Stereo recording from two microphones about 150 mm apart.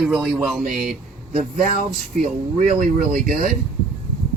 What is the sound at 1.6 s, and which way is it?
Speech, 60° right (ahead or behind).